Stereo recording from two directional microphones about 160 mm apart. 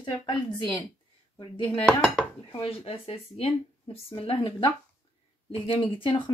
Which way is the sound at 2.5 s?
35° left (ahead or behind).